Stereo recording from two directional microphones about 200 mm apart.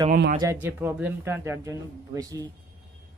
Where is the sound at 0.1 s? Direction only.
45° right (ahead or behind).